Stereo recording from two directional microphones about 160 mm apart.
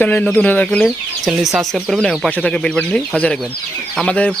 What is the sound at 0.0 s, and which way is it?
Speech, 10° left (ahead or behind).